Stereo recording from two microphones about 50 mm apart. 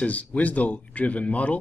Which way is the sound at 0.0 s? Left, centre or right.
Left.